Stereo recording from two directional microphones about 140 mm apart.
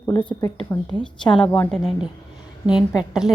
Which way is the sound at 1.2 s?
35° left (ahead or behind).